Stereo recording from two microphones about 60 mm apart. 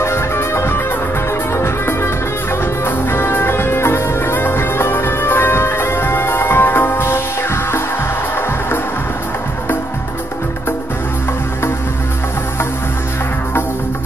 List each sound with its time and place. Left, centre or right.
0.0 s music: left